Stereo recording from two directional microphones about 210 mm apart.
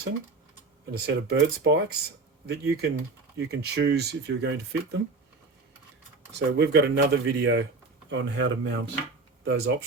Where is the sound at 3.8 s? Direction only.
50° right (ahead or behind).